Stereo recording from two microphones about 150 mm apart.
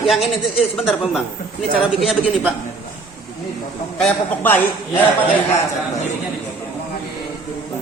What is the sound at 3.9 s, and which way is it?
A man's voice, 10° left (ahead or behind).